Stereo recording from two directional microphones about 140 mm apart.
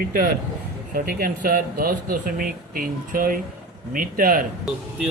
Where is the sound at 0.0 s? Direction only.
90° right.